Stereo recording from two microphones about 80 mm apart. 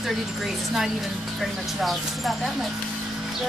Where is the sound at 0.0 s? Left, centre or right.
Centre.